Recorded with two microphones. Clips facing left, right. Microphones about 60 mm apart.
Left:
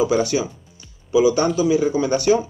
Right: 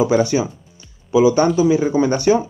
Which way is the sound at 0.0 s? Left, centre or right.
Right.